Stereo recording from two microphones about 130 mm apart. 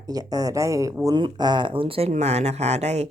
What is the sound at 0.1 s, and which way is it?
Speech, 30° right (ahead or behind).